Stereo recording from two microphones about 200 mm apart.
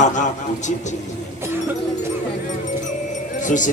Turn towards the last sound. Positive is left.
turn(degrees=40)  # may be behind; listen again after turning